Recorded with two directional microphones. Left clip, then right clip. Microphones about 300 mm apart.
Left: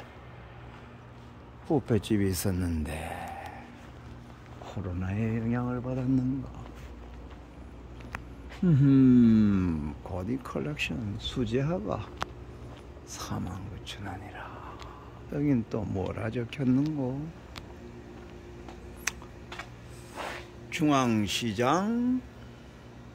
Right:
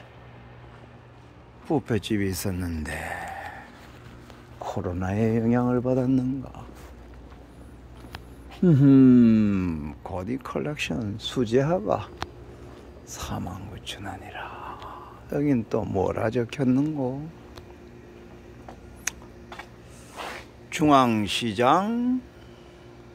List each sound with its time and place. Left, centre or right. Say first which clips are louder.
1.7 s speech: right 2 dB; centre
4.6 s speech: right 9 dB; centre
8.6 s speech: right 6 dB; centre
13.1 s whispering: right 4 dB; centre
16.0 s speech: right 9 dB; centre
19.1 s a sound: right 1 dB; centre
20.7 s speech: right 7 dB; centre